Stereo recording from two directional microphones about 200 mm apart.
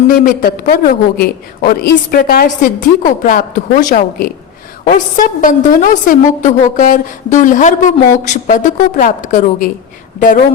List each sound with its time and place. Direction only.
0.3 s a woman's voice: 45° left (ahead or behind)